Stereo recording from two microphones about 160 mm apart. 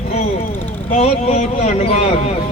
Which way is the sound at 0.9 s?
45° left (ahead or behind).